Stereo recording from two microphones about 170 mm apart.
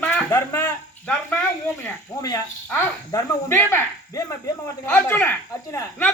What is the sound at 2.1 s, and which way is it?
Speech, 20° left (ahead or behind).